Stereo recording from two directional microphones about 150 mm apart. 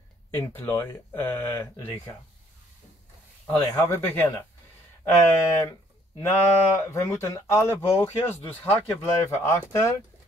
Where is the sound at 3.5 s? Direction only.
15° left (ahead or behind).